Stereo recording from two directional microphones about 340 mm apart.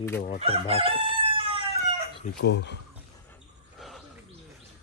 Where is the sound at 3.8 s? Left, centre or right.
Centre.